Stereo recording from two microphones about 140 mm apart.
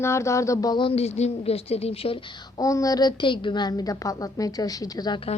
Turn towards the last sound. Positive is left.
turn(degrees=30)  # may be behind; listen again after turning